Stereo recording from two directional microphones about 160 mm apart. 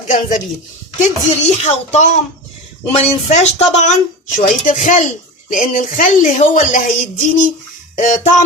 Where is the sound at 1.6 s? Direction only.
45° left (ahead or behind).